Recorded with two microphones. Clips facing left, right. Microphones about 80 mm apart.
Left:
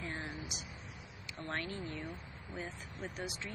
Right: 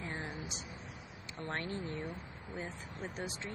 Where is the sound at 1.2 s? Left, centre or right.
Right.